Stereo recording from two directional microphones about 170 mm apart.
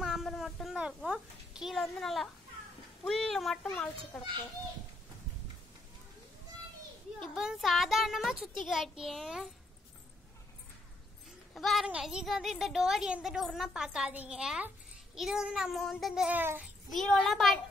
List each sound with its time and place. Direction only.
0.0 s a sound: centre (ahead or behind)
3.1 s a child's voice: centre (ahead or behind)
7.2 s a woman's voice: centre (ahead or behind)
11.5 s a woman's voice: centre (ahead or behind)
16.9 s a woman's voice: 5° left (ahead or behind)